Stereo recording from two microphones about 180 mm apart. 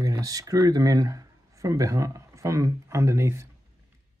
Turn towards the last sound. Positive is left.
turn(degrees=-15)  # may be behind; listen again after turning